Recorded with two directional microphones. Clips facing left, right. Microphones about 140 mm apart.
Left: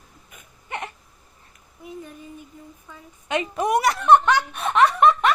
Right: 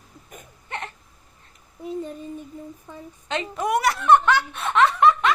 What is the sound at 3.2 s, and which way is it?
Snicker, 15° left (ahead or behind).